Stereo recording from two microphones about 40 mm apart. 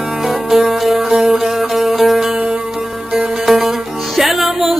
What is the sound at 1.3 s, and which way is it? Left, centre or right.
Music, centre.